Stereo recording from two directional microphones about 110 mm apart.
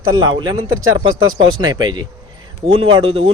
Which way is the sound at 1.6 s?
40° right (ahead or behind).